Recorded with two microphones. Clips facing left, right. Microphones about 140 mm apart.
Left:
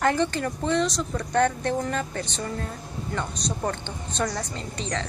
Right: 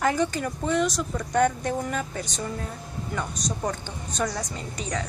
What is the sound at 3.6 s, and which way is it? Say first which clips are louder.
A woman's voice: left 1 dB; 10° right (ahead or behind).